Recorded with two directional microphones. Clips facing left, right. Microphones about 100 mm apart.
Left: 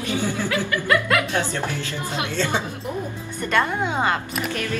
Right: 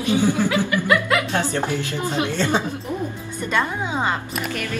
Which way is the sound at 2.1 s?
20° left (ahead or behind).